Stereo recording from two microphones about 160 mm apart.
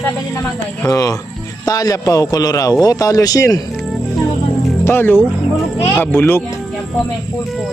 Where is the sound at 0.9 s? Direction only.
20° left (ahead or behind).